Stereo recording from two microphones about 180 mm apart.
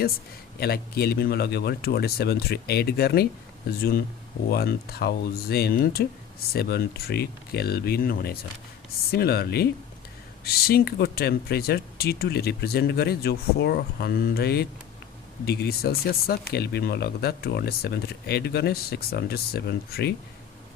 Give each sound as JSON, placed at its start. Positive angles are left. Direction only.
{"t": 0.6, "sound": "speech", "side_deg": 60}